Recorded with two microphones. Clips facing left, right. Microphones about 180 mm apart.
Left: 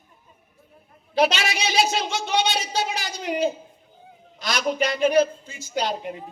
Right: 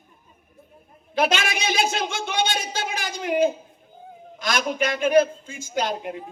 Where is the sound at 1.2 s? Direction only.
50° right (ahead or behind).